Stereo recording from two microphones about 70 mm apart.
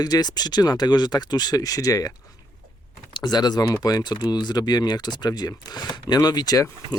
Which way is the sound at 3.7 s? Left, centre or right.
Left.